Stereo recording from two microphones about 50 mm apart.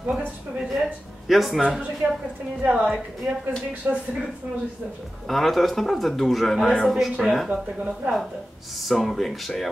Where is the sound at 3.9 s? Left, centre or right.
Right.